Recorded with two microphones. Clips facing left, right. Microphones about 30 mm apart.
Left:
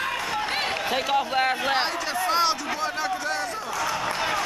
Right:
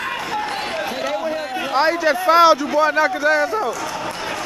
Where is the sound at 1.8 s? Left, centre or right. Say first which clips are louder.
Right 9 dB; centre.